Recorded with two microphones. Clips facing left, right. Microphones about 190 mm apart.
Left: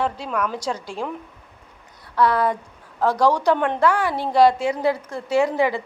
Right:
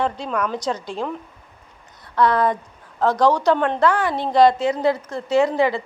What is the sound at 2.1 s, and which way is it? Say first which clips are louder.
A woman's voice: right 1 dB; 5° left (ahead or behind).